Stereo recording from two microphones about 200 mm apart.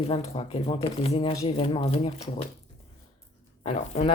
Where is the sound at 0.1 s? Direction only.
30° left (ahead or behind).